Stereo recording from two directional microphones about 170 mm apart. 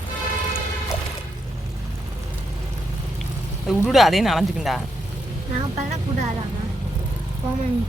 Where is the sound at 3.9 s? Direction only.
Centre (ahead or behind).